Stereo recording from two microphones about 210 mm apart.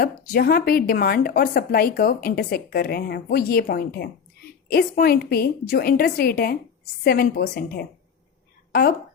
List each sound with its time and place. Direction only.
0.0 s speech: 45° left (ahead or behind)